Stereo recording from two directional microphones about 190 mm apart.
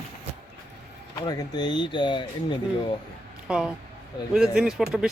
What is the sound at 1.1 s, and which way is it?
Speech, 20° left (ahead or behind).